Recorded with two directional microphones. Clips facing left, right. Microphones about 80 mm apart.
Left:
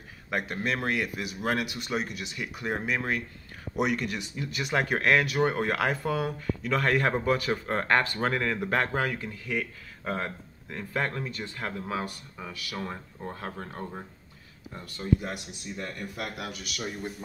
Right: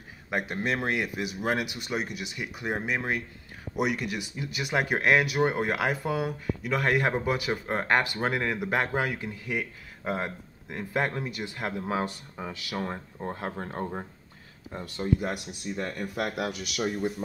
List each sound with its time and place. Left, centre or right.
0.3 s speech: centre
3.7 s speech: centre
15.1 s speech: centre
16.2 s speech: right
16.5 s speech: centre